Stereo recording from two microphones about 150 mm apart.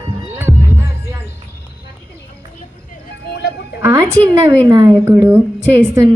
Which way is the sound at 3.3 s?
90° left.